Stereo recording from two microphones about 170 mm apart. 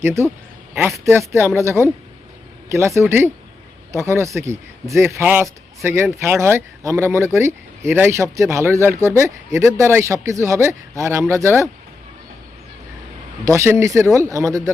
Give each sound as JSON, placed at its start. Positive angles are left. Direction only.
{"t": 0.0, "sound": "speech", "side_deg": -15}
{"t": 13.4, "sound": "speech", "side_deg": -15}